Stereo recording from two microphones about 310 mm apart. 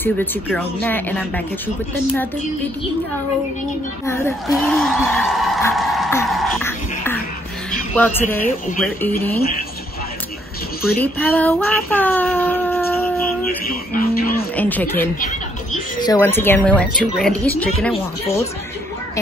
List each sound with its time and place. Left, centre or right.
0.0 s a woman's voice: centre
4.0 s a woman's voice: centre
10.8 s child singing: centre
13.7 s a sound: left
14.5 s a woman's voice: centre